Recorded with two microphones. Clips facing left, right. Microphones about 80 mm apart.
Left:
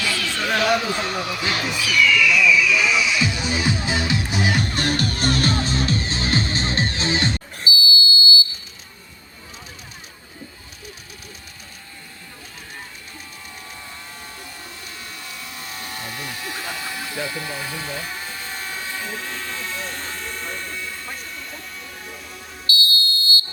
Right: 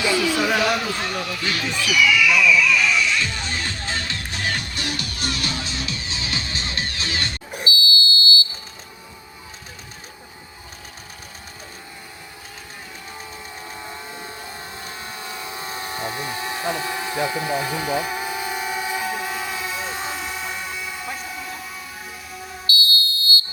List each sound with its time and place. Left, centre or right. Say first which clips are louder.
0.0 s a sound: right 5 dB; centre
0.9 s a man's voice: left 2 dB; left
1.1 s speech: left 1 dB; centre
1.9 s music: even; centre
4.6 s music: left 7 dB; left
7.7 s buzzer: left 1 dB; centre
14.8 s a sound: right 4 dB; right; by 22.4 s centre
22.7 s smoke detector: even; left